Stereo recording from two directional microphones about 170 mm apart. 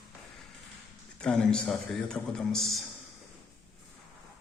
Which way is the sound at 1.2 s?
5° left (ahead or behind).